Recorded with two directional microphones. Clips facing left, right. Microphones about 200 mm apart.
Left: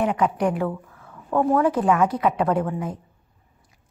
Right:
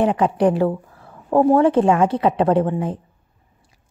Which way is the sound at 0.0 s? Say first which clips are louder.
Right 5 dB; 30° right (ahead or behind).